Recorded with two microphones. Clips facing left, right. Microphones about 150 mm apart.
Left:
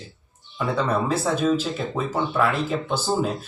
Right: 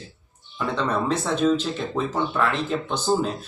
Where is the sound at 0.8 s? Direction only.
5° left (ahead or behind).